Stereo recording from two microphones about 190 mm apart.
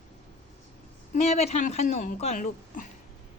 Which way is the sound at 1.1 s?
35° left (ahead or behind).